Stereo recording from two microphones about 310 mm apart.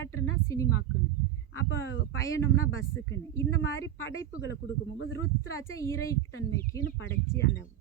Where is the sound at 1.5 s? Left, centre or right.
Left.